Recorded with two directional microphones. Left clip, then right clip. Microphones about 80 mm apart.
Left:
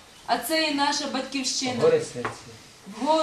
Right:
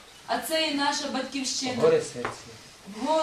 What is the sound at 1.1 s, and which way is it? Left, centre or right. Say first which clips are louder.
Speech: left 2 dB; centre.